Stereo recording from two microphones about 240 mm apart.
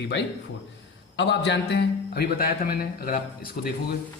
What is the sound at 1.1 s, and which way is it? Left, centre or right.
A man's voice, left.